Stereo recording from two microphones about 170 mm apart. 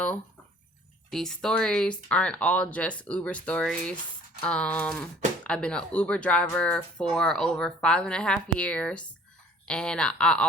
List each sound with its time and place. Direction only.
1.1 s speech: 5° left (ahead or behind)